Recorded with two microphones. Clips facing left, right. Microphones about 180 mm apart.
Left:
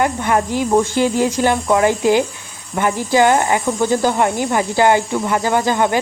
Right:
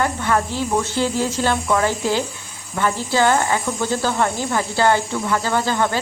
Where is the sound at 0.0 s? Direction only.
15° left (ahead or behind).